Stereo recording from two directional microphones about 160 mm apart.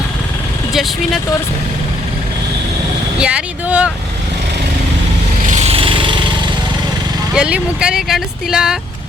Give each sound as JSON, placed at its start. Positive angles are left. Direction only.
{"t": 0.7, "sound": "speech", "side_deg": 0}
{"t": 3.2, "sound": "vehicle", "side_deg": -5}
{"t": 5.5, "sound": "lawn mower", "side_deg": -45}
{"t": 7.3, "sound": "speech", "side_deg": -5}